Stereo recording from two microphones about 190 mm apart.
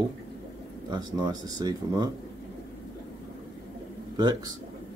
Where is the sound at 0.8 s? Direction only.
20° right (ahead or behind).